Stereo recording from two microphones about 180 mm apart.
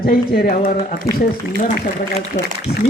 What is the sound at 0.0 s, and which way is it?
Speech, 55° left (ahead or behind).